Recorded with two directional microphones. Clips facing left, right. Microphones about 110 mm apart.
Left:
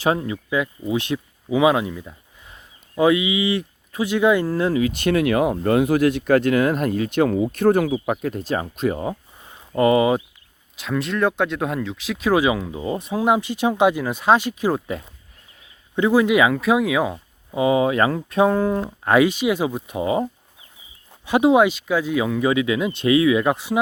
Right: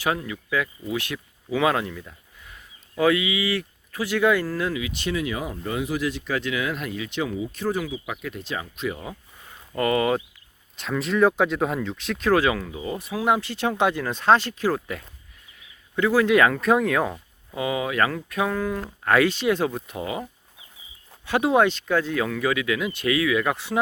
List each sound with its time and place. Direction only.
0.0 s speech: 25° left (ahead or behind)
4.8 s speech: 50° left (ahead or behind)
7.9 s speech: 45° left (ahead or behind)
9.4 s a sound: 20° left (ahead or behind)
10.8 s speech: centre (ahead or behind)
17.5 s speech: 25° left (ahead or behind)
21.2 s speech: 15° left (ahead or behind)